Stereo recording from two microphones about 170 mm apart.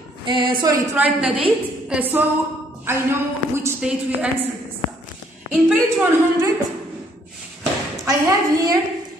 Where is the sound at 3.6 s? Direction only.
5° right (ahead or behind).